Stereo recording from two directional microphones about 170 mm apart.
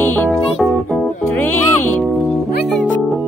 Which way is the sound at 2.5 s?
80° left.